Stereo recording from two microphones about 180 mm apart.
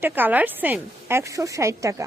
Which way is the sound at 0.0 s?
10° right (ahead or behind).